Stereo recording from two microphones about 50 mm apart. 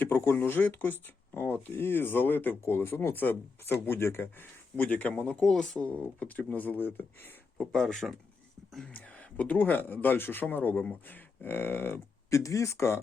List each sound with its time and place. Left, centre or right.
0.0 s speech: left
5.3 s speech: centre
5.8 s speech: left
7.6 s speech: centre
8.9 s speech: left
12.3 s speech: left